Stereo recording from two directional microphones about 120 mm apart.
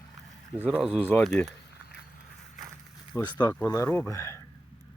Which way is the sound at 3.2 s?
35° left (ahead or behind).